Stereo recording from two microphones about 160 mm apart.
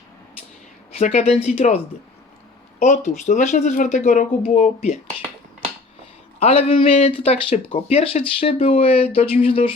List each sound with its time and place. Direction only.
0.9 s speech: 40° left (ahead or behind)
6.4 s speech: 40° left (ahead or behind)